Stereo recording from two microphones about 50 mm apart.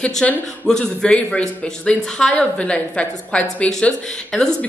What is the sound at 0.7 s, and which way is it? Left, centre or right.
Speech, centre.